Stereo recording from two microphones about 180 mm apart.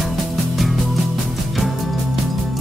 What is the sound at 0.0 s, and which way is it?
Music, centre (ahead or behind).